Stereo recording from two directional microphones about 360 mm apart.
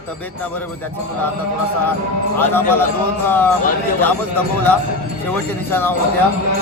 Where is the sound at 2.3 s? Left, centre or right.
Centre.